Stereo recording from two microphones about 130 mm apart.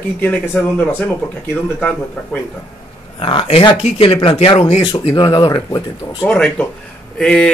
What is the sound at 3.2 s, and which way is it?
Speech, 40° left (ahead or behind).